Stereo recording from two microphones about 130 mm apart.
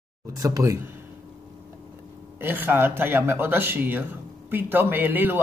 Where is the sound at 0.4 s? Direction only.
25° right (ahead or behind).